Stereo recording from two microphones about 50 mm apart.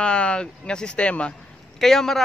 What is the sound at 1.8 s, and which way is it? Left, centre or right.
Speech, centre.